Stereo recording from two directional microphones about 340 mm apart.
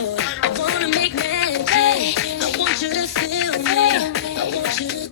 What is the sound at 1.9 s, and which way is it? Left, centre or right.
Music, left.